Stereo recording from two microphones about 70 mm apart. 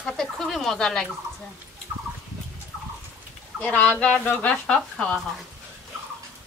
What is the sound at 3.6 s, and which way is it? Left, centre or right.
Speech, centre.